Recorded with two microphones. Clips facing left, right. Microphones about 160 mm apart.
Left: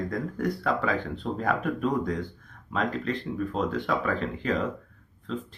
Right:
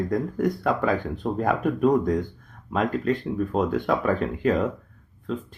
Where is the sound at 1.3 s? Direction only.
40° right (ahead or behind).